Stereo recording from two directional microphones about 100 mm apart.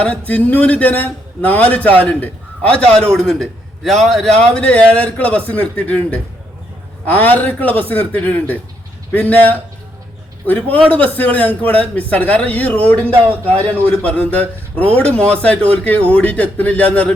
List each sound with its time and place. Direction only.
0.0 s a man's voice: 15° left (ahead or behind)